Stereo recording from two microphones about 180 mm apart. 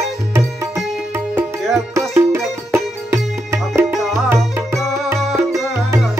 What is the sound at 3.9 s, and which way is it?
Music, centre (ahead or behind).